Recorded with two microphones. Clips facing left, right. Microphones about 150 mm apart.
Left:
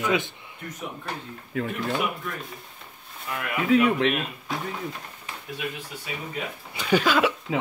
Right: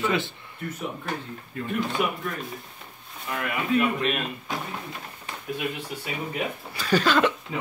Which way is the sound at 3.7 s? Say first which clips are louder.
Left 4 dB; 90° left.